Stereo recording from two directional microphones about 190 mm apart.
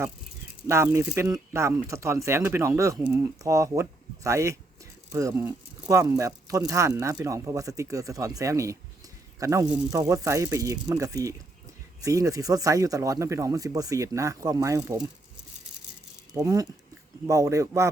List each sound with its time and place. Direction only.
0.7 s speech: 15° right (ahead or behind)
16.3 s speech: 15° right (ahead or behind)